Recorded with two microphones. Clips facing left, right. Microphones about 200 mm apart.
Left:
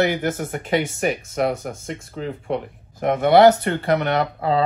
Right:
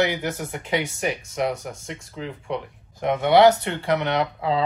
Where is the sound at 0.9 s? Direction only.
55° left (ahead or behind).